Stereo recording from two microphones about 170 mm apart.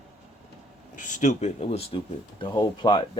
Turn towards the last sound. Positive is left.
turn(degrees=25)  # may be behind; listen again after turning